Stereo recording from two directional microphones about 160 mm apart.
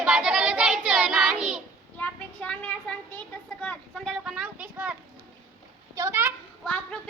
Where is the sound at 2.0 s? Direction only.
5° left (ahead or behind); by 6.3 s 15° right (ahead or behind).